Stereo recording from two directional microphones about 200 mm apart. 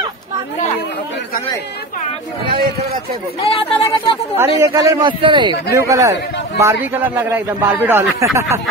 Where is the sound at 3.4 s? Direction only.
30° left (ahead or behind).